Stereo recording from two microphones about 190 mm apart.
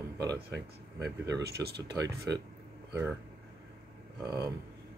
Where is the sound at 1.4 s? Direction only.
60° right (ahead or behind).